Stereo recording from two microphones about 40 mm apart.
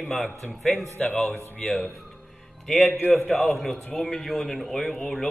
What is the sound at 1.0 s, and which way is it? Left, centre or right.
Speech, centre.